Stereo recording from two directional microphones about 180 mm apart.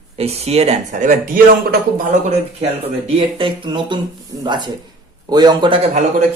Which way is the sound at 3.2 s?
25° right (ahead or behind).